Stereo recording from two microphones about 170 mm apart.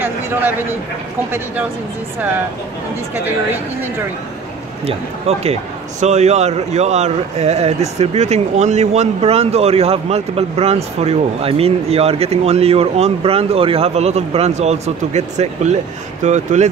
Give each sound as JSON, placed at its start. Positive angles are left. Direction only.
{"t": 0.0, "sound": "a man's voice", "side_deg": -10}
{"t": 4.8, "sound": "speech", "side_deg": -35}